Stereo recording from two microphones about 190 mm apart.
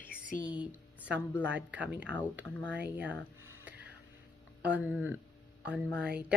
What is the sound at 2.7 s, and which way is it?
Speech, 5° right (ahead or behind).